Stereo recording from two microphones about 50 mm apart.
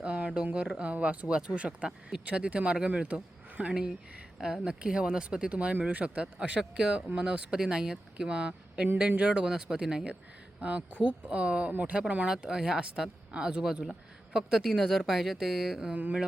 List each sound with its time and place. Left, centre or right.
0.0 s a sound: right
0.4 s speech: right
4.4 s speech: centre
4.6 s speech: centre
10.6 s speech: right
12.5 s speech: centre